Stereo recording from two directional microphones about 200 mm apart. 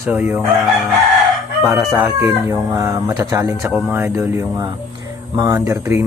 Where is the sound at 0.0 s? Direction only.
10° right (ahead or behind).